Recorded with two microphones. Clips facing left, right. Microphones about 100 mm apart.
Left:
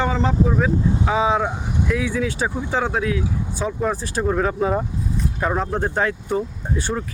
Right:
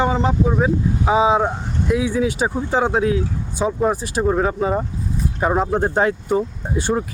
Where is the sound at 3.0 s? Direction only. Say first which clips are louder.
Right 3 dB; 30° right (ahead or behind).